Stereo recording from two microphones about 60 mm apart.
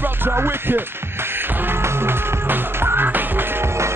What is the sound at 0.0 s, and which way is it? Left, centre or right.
Music, right.